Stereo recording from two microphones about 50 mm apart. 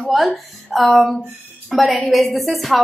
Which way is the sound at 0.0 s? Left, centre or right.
Centre.